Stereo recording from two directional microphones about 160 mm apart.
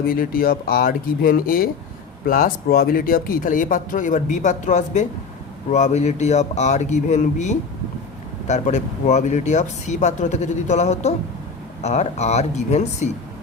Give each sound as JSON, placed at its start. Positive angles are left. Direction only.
{"t": 0.0, "sound": "speech", "side_deg": 65}